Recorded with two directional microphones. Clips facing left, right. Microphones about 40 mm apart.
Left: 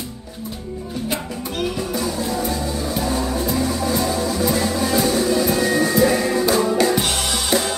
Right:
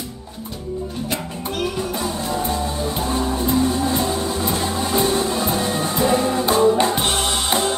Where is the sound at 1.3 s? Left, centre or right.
Right.